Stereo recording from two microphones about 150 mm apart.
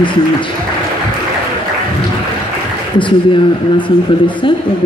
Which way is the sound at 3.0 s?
35° left (ahead or behind).